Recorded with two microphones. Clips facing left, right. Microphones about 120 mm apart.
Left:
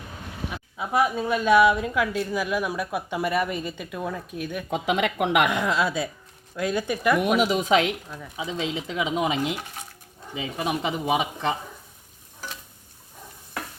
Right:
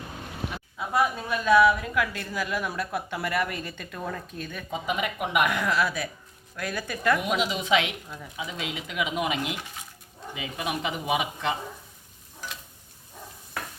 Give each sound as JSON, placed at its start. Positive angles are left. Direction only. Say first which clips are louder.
{"t": 0.8, "sound": "speech", "louder": "left 3 dB", "side_deg": 20}
{"t": 3.9, "sound": "speech", "louder": "left 2 dB", "side_deg": 5}
{"t": 4.7, "sound": "speech", "louder": "left 5 dB", "side_deg": 75}
{"t": 5.5, "sound": "speech", "louder": "left 2 dB", "side_deg": 20}
{"t": 7.3, "sound": "a woman's voice", "louder": "left 4 dB", "side_deg": 45}
{"t": 8.4, "sound": "speech", "louder": "left 6 dB", "side_deg": 25}